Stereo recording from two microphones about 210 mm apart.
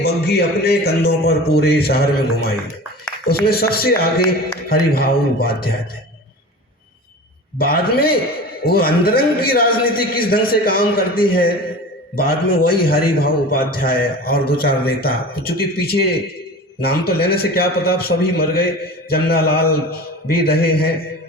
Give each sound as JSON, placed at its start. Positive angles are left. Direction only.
{"t": 0.0, "sound": "a man's voice", "side_deg": 50}
{"t": 7.6, "sound": "a man's voice", "side_deg": 45}